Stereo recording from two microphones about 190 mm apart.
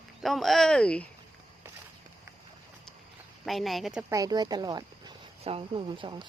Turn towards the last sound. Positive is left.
turn(degrees=-25)  # may be behind; listen again after turning